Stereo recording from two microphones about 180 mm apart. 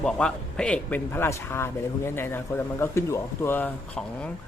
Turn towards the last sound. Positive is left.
turn(degrees=10)  # may be behind; listen again after turning